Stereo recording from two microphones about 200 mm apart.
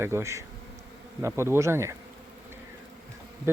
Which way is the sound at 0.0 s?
15° right (ahead or behind).